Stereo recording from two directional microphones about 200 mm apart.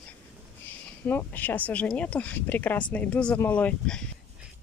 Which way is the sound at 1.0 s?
10° left (ahead or behind).